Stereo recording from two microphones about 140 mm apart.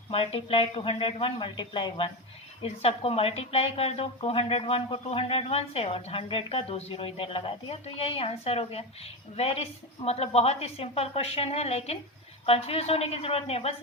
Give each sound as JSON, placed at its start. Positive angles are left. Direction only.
{"t": 0.1, "sound": "speech", "side_deg": 40}